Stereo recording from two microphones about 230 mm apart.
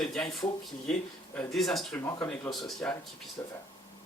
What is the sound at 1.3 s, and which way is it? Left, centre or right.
Speech, centre.